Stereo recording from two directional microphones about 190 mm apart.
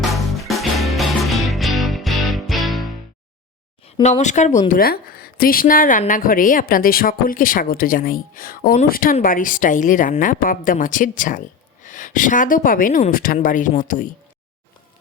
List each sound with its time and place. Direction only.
0.0 s music: centre (ahead or behind)
3.8 s speech: 35° left (ahead or behind)
4.7 s a woman's voice: 50° left (ahead or behind)